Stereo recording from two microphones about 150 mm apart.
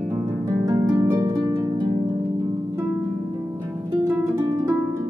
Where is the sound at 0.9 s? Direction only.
15° right (ahead or behind).